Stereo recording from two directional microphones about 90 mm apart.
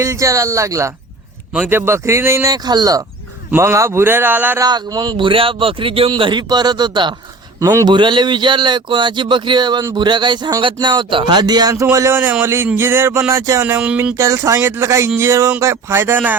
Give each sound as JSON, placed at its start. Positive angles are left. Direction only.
{"t": 0.0, "sound": "speech", "side_deg": -35}
{"t": 2.6, "sound": "speech", "side_deg": -45}
{"t": 3.6, "sound": "a sound", "side_deg": -30}
{"t": 4.6, "sound": "speech", "side_deg": -45}
{"t": 6.1, "sound": "speech", "side_deg": -60}
{"t": 12.7, "sound": "a sound", "side_deg": -25}
{"t": 13.7, "sound": "speech", "side_deg": -15}
{"t": 14.2, "sound": "speech", "side_deg": -35}
{"t": 15.6, "sound": "a sound", "side_deg": -30}